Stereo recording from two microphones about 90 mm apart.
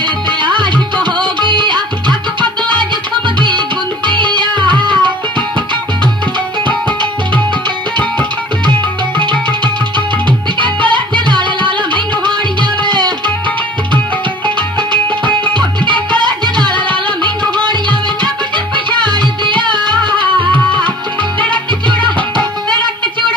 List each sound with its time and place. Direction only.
0.0 s music: 60° right (ahead or behind)
9.1 s music: 60° right (ahead or behind)
10.6 s music: 65° right (ahead or behind)
14.4 s music: 60° right (ahead or behind)